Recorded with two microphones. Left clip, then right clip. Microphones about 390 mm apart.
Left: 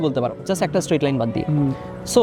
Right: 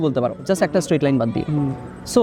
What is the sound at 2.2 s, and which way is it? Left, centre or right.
Speech, centre.